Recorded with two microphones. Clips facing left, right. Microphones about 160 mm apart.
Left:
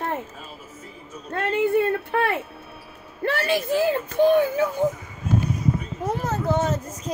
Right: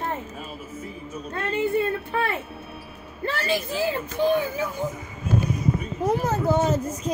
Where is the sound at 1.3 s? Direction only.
60° left (ahead or behind).